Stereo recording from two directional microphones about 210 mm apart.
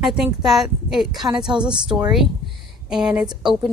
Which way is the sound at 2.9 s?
5° right (ahead or behind).